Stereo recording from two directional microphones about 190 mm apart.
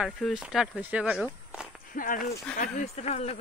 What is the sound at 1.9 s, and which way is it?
Speech, 45° left (ahead or behind).